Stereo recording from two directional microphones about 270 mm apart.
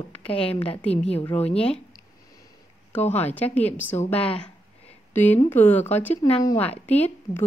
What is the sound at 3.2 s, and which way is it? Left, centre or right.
A woman's voice, centre.